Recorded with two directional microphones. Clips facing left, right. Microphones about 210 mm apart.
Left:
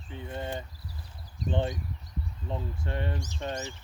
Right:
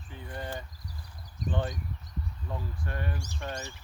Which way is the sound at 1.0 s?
25° left (ahead or behind).